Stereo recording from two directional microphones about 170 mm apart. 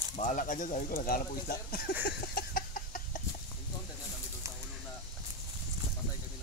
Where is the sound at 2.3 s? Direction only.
60° left (ahead or behind).